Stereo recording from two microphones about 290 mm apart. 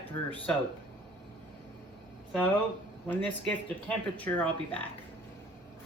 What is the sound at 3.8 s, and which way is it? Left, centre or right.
Speech, centre.